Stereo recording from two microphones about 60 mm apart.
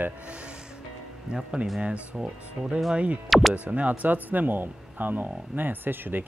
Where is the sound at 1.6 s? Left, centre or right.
Centre.